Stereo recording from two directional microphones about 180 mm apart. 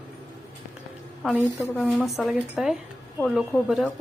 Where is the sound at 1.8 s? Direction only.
Centre (ahead or behind).